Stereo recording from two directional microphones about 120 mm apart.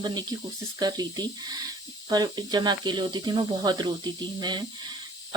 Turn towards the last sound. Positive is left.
turn(degrees=-40)  # may be behind; listen again after turning